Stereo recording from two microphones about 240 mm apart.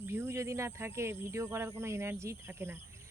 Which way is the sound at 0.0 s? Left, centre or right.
Centre.